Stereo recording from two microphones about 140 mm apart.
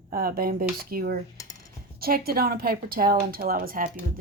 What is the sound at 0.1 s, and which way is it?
Speech, 90° right.